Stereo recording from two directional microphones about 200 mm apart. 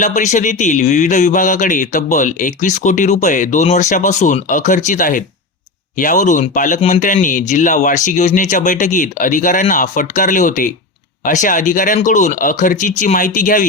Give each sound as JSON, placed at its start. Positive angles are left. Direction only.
{"t": 0.0, "sound": "speech", "side_deg": 35}